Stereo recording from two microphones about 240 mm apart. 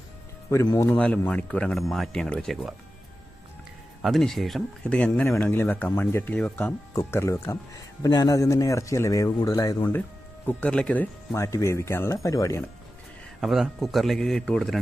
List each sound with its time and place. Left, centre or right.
0.5 s speech: centre
4.0 s speech: centre
13.4 s speech: centre